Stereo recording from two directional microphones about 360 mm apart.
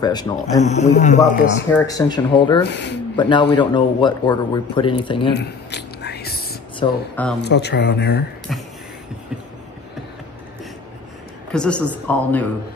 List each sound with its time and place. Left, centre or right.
0.0 s a man's voice: centre
2.6 s speech: left
3.2 s a man's voice: centre
5.3 s whispering: left
6.8 s a woman's voice: centre
7.4 s speech: left
8.5 s a woman's voice: centre
11.5 s a woman's voice: centre